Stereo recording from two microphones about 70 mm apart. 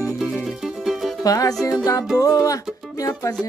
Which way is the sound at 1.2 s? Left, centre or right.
Left.